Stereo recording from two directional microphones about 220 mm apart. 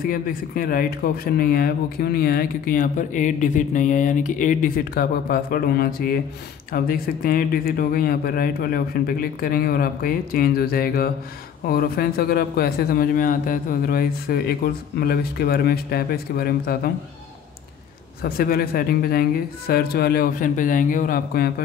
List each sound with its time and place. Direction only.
0.0 s a man's voice: 40° left (ahead or behind)
18.2 s a man's voice: 45° left (ahead or behind)